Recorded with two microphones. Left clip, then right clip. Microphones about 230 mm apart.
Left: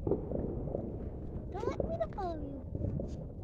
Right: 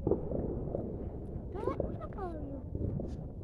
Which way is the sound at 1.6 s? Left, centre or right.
Left.